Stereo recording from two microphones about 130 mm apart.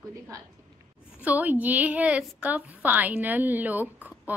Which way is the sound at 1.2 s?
15° right (ahead or behind).